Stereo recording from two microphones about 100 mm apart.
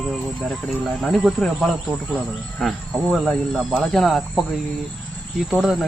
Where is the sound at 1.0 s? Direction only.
Centre (ahead or behind).